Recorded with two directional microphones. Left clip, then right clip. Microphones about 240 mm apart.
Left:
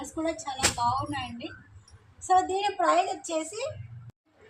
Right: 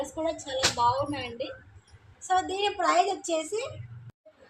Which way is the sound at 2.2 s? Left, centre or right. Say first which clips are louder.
Left 2 dB; right.